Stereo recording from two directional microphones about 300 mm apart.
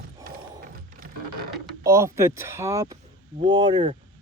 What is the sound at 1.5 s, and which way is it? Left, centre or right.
Speech, centre.